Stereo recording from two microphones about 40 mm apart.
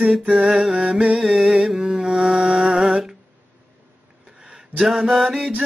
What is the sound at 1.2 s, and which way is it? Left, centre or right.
Music, centre.